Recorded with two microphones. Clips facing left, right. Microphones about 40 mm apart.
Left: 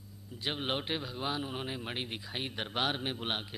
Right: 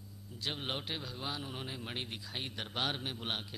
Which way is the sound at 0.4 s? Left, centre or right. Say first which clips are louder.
Left 4 dB; centre.